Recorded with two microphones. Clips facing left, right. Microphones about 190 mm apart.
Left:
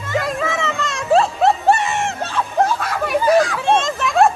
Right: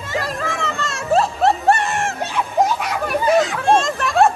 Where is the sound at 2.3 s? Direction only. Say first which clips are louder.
Even; 20° right (ahead or behind).